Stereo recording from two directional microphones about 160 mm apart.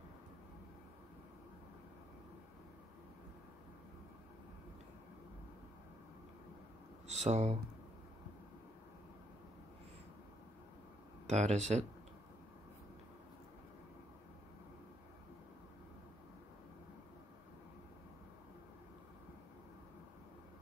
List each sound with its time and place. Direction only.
7.1 s speech: 45° right (ahead or behind)
11.2 s speech: 45° right (ahead or behind)